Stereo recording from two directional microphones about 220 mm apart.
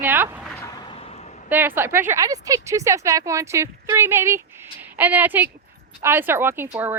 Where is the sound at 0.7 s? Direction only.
20° left (ahead or behind).